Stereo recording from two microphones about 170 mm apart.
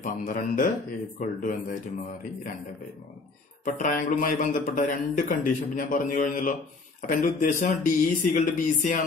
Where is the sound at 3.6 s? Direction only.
50° left (ahead or behind).